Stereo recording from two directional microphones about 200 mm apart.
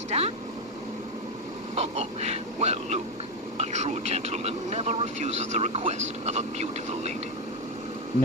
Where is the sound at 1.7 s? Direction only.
30° right (ahead or behind).